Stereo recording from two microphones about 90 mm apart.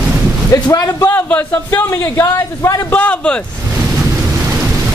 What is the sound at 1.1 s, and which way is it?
A man's voice, 20° left (ahead or behind).